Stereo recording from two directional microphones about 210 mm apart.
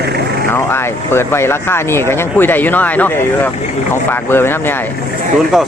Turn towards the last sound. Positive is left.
turn(degrees=0)  # may be behind; listen again after turning